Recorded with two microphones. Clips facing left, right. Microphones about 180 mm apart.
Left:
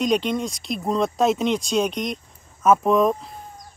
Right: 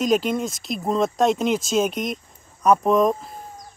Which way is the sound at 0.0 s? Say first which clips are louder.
Right 1 dB; 5° right (ahead or behind).